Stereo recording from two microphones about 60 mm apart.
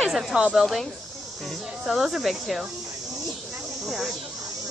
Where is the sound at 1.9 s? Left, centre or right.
Centre.